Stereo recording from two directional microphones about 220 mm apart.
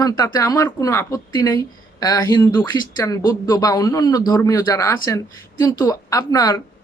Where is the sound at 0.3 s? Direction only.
15° left (ahead or behind).